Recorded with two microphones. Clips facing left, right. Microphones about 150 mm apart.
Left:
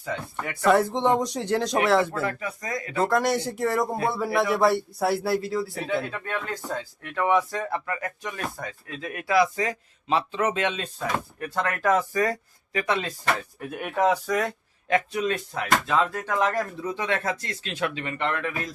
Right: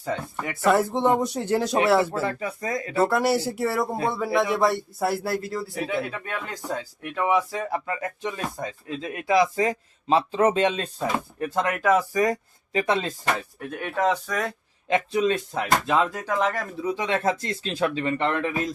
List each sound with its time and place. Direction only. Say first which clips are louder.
0.5 s a man's voice: even; centre (ahead or behind)
2.2 s speech: right 2 dB; 30° right (ahead or behind)
3.0 s a man's voice: right 1 dB; 10° right (ahead or behind)
7.9 s speech: right 2 dB; 25° right (ahead or behind)
11.3 s speech: right 3 dB; 25° right (ahead or behind)
12.8 s speech: right 2 dB; 30° right (ahead or behind)
13.6 s a man's voice: left 1 dB; 5° left (ahead or behind)
14.8 s speech: right 2 dB; 25° right (ahead or behind); by 17.1 s 10° right (ahead or behind)
17.1 s speech: right 3 dB; 30° right (ahead or behind)